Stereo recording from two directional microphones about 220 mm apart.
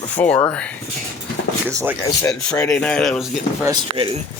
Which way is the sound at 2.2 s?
5° left (ahead or behind).